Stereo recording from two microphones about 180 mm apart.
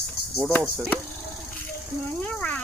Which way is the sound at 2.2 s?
5° left (ahead or behind).